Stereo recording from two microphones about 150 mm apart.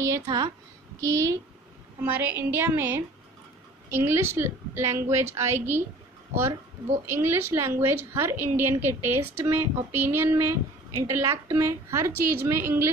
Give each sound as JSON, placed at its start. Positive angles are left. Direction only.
{"t": 0.0, "sound": "a woman's voice", "side_deg": -25}
{"t": 7.1, "sound": "a woman's voice", "side_deg": -15}